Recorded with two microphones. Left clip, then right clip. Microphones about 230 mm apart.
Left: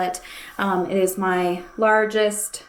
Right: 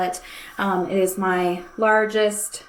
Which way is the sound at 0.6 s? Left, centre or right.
Left.